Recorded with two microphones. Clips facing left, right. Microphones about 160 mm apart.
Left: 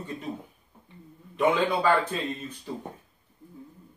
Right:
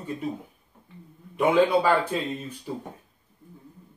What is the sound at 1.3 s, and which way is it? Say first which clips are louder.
Speech: right 4 dB; 10° right (ahead or behind).